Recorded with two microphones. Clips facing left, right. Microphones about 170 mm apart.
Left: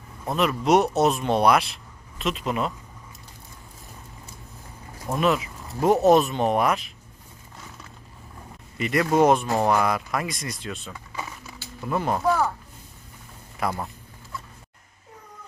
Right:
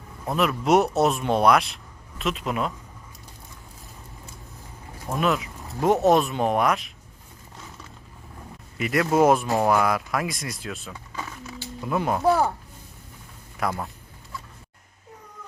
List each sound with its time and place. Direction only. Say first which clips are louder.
0.3 s speech: even; centre (ahead or behind)
5.2 s speech: left 1 dB; centre (ahead or behind)
8.8 s speech: even; centre (ahead or behind)
11.1 s a sound: right 1 dB; 10° left (ahead or behind)
11.9 s speech: even; 5° right (ahead or behind)
12.2 s speech: right 3 dB; 35° right (ahead or behind)
13.6 s speech: even; centre (ahead or behind)